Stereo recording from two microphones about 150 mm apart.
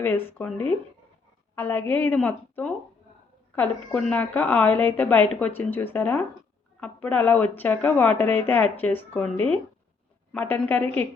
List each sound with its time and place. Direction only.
0.0 s speech: 15° left (ahead or behind)